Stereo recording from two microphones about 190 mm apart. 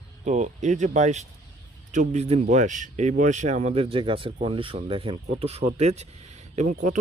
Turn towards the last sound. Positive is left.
turn(degrees=-40)  # may be behind; listen again after turning